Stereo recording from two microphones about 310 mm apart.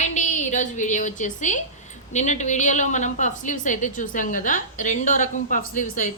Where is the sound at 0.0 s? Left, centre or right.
Left.